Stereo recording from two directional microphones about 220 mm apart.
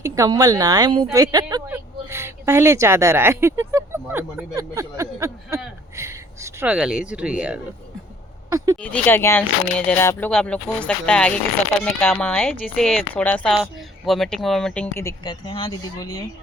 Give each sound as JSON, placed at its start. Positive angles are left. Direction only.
{"t": 0.0, "sound": "speech", "side_deg": -15}
{"t": 8.4, "sound": "a sound", "side_deg": -15}
{"t": 8.8, "sound": "speech", "side_deg": 10}